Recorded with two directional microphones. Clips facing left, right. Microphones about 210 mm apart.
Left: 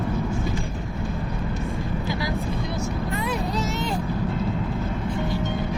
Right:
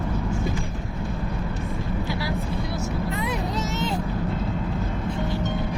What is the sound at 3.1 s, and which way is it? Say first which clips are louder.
Vehicle: left 1 dB; 20° right (ahead or behind).